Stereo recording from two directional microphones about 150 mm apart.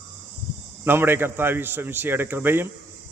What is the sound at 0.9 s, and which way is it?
A man's voice, 15° right (ahead or behind).